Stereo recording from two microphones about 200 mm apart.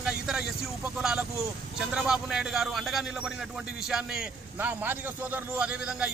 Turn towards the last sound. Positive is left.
turn(degrees=-5)  # may be behind; listen again after turning